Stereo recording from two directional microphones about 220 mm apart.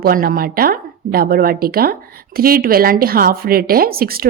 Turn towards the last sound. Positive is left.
turn(degrees=-45)  # may be behind; listen again after turning